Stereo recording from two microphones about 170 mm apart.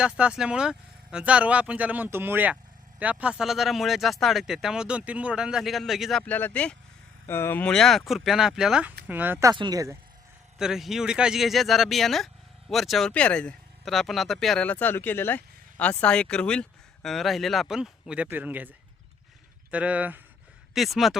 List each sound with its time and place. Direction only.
0.0 s speech: 5° right (ahead or behind)
10.6 s speech: centre (ahead or behind)
19.7 s speech: 10° right (ahead or behind)